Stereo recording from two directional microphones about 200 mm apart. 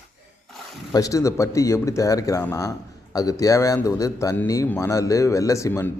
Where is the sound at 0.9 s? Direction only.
15° left (ahead or behind).